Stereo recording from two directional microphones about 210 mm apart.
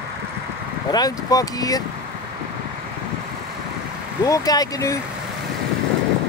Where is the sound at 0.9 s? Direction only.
20° left (ahead or behind).